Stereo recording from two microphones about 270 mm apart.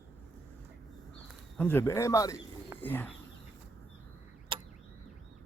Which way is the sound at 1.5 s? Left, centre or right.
Centre.